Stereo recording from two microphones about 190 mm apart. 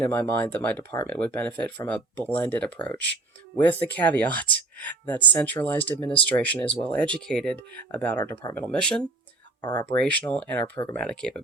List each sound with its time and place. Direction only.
0.0 s speech: 10° left (ahead or behind)
9.6 s speech: 25° left (ahead or behind)
9.9 s speech: 5° left (ahead or behind)